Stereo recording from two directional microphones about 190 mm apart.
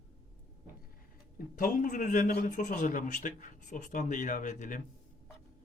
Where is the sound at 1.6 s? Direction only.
45° left (ahead or behind).